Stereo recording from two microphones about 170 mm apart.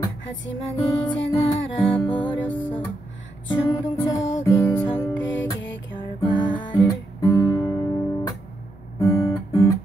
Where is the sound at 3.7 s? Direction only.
20° left (ahead or behind).